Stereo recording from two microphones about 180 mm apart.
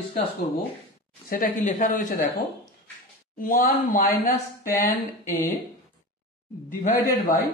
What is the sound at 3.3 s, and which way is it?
Speech, 50° left (ahead or behind).